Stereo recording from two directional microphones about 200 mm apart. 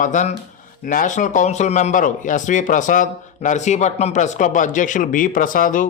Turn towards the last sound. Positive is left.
turn(degrees=45)  # may be behind; listen again after turning